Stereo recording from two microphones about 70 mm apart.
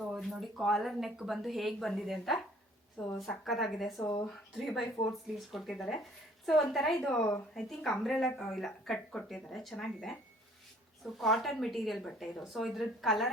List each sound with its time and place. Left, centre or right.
0.0 s a woman's voice: centre
4.0 s speech: left
4.3 s a woman's voice: centre
7.2 s speech: left
7.5 s a woman's voice: centre